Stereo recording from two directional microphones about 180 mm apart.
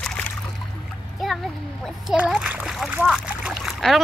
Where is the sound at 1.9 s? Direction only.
5° right (ahead or behind).